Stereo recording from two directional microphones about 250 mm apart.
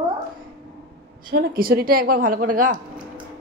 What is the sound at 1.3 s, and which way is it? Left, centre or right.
Speech, right.